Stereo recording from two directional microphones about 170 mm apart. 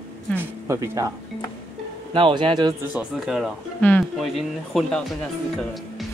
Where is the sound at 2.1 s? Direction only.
30° right (ahead or behind).